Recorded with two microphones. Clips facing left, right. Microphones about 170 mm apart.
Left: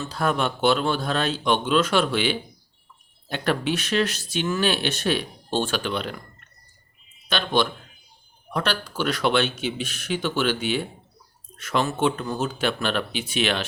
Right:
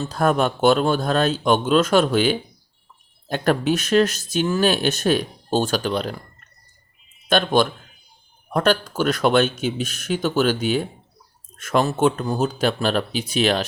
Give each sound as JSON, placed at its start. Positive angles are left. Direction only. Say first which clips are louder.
{"t": 0.0, "sound": "speech", "louder": "right 5 dB", "side_deg": -45}
{"t": 7.3, "sound": "speech", "louder": "right 5 dB", "side_deg": -50}